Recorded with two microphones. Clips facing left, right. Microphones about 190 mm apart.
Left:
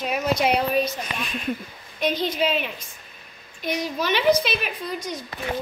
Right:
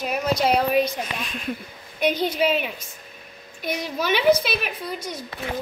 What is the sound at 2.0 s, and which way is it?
A woman's voice, 10° right (ahead or behind).